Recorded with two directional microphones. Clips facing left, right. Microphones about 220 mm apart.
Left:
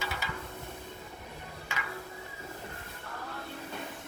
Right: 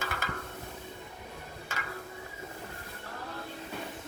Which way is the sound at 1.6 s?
45° right (ahead or behind).